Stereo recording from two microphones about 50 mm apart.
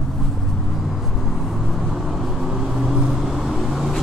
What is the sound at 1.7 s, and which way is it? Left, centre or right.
Vehicle, centre.